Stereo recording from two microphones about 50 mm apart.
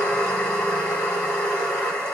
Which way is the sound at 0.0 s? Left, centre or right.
Centre.